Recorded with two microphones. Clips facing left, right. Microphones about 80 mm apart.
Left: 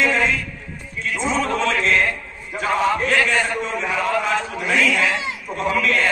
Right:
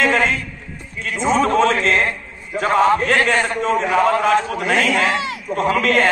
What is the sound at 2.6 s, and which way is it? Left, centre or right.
A man's voice, right.